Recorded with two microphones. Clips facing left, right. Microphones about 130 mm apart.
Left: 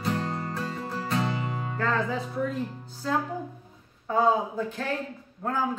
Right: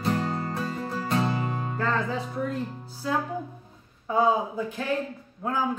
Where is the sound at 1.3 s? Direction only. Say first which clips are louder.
Right 2 dB; 40° right (ahead or behind).